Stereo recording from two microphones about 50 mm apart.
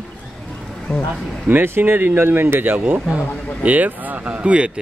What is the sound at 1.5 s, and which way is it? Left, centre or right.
Speech, right.